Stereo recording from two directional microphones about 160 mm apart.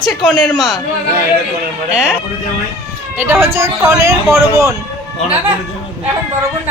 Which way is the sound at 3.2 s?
15° right (ahead or behind).